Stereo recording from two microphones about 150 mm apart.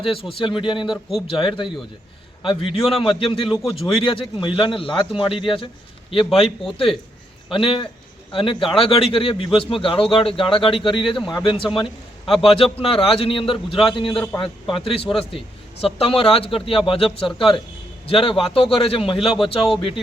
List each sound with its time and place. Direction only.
0.0 s a man's voice: 35° left (ahead or behind)